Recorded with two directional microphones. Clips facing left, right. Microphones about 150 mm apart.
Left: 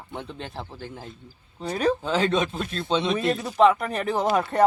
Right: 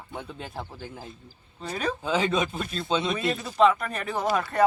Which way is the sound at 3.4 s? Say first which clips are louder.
Left 2 dB; 15° left (ahead or behind).